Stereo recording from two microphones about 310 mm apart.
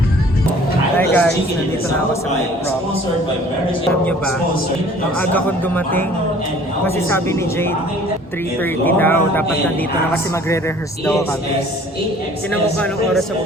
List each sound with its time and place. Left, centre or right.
0.9 s a sound: centre
5.3 s speech: centre
8.8 s speech: centre